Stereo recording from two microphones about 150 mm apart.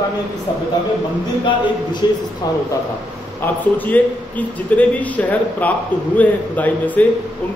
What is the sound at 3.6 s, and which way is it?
Speech, 10° left (ahead or behind).